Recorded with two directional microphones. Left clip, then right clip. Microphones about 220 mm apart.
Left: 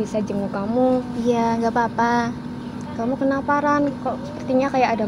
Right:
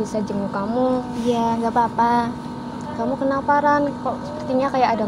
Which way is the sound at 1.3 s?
25° left (ahead or behind).